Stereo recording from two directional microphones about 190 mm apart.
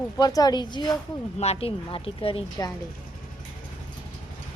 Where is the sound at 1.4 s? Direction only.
30° left (ahead or behind).